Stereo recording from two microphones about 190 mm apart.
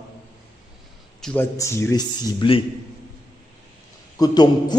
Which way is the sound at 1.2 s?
10° left (ahead or behind).